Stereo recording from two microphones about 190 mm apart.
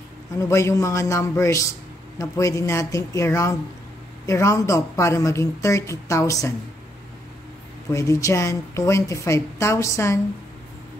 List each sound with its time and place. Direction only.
0.4 s a man's voice: 15° left (ahead or behind)
7.9 s a man's voice: 15° left (ahead or behind)